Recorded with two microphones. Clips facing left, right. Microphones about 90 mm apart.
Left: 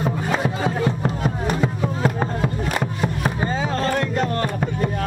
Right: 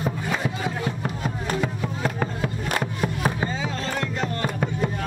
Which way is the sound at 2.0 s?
15° left (ahead or behind).